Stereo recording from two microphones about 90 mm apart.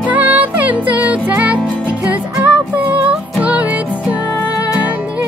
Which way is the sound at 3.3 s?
15° right (ahead or behind).